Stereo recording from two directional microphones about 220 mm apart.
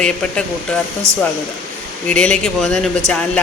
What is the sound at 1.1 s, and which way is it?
Speech, 10° right (ahead or behind).